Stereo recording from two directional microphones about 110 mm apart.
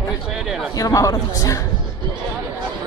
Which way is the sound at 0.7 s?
30° left (ahead or behind).